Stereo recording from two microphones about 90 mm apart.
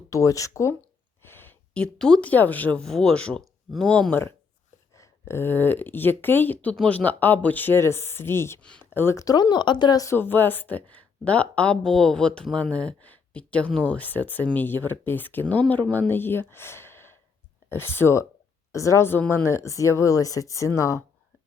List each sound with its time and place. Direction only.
0.1 s speech: 40° left (ahead or behind)
1.2 s a sound: 25° left (ahead or behind)
1.7 s speech: 10° left (ahead or behind)
2.8 s speech: 5° left (ahead or behind)
3.4 s a sound: centre (ahead or behind)
3.8 s speech: 10° left (ahead or behind)
4.9 s speech: 30° left (ahead or behind)
8.8 s a sound: 25° left (ahead or behind)
9.1 s speech: 45° left (ahead or behind)
10.2 s speech: 20° left (ahead or behind)